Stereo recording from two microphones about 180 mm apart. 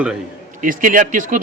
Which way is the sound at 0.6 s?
50° right (ahead or behind).